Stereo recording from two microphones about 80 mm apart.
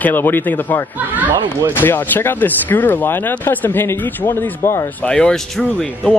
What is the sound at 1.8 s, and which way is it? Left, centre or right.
Speech, left.